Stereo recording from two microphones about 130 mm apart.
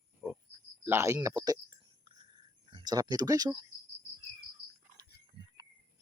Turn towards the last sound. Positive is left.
turn(degrees=-40)  # may be behind; listen again after turning